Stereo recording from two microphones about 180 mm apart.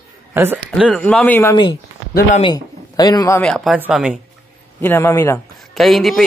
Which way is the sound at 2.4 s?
20° left (ahead or behind).